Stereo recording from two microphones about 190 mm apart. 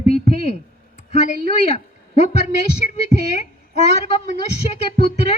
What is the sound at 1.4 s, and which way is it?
A woman's voice, 35° left (ahead or behind).